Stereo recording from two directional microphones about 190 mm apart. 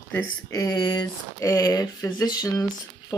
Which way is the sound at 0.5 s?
20° left (ahead or behind).